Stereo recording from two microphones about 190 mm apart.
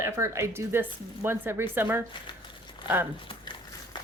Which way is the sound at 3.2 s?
25° left (ahead or behind).